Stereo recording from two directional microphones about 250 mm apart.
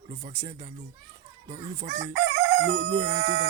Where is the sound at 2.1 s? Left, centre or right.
Right.